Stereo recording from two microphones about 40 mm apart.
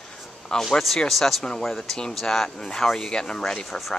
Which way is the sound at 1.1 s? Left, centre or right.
Centre.